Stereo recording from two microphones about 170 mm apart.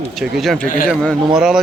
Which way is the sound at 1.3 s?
5° right (ahead or behind).